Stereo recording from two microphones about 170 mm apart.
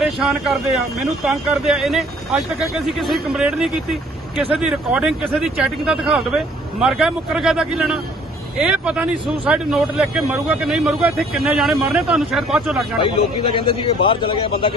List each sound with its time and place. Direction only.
0.0 s speech: centre (ahead or behind)
13.0 s a man's voice: 30° left (ahead or behind)